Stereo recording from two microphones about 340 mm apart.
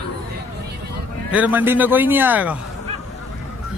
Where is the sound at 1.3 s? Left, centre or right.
Centre.